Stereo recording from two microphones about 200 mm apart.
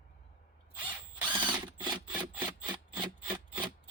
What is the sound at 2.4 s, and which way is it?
Wood, 20° right (ahead or behind).